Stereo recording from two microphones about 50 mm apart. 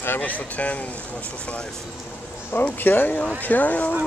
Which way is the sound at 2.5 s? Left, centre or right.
Left.